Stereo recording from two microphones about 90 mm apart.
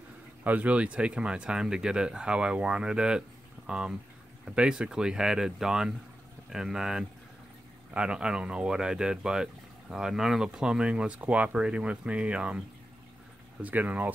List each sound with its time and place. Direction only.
0.4 s speech: 15° right (ahead or behind)